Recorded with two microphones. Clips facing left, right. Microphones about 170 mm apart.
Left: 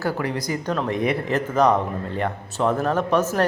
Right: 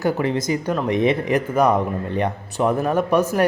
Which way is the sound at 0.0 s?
25° right (ahead or behind).